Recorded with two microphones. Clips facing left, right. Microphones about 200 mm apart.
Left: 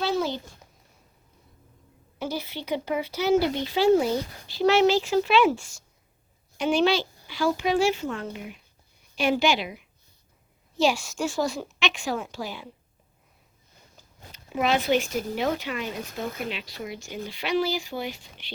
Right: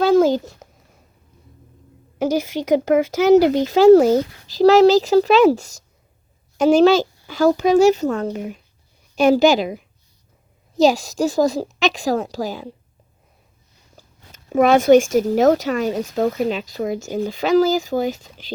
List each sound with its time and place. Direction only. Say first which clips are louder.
0.2 s a child's voice: right 13 dB; 45° right (ahead or behind)
2.1 s a woman's voice: right 11 dB; 90° right
3.3 s speech: right 10 dB; 40° right (ahead or behind)
13.9 s speech: right 2 dB; 45° right (ahead or behind)